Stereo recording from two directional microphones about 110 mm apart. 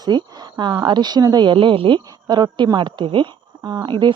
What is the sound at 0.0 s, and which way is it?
A woman's voice, 40° right (ahead or behind).